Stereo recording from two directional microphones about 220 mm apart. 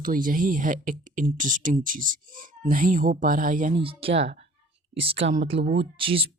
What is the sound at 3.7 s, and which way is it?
Speech, 25° right (ahead or behind).